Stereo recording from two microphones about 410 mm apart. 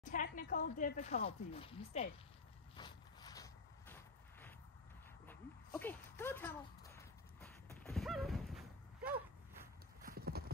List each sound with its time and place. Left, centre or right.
0.0 s speech: centre
2.7 s a sound: centre
5.8 s horse: centre
10.0 s clip-clop: right